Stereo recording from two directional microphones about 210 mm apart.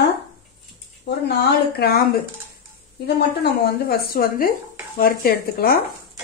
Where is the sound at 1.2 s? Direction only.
50° left (ahead or behind).